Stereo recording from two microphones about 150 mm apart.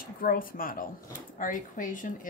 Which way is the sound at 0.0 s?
70° left (ahead or behind).